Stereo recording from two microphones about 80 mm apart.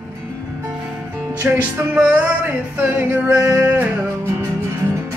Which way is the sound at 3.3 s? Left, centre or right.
Right.